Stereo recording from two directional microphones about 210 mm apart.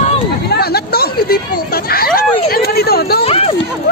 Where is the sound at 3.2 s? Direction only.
25° left (ahead or behind).